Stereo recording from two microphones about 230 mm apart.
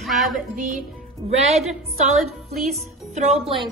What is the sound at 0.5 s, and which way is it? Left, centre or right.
Speech, right.